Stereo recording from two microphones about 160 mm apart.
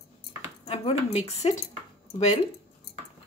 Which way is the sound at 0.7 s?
40° left (ahead or behind).